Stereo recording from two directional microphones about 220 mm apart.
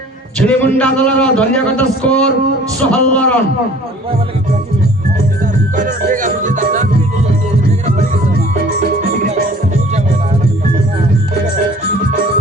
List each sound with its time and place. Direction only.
0.3 s speech: 5° left (ahead or behind)
5.7 s music: 35° right (ahead or behind)